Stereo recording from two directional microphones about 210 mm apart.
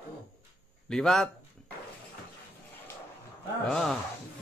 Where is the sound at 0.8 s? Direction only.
5° left (ahead or behind).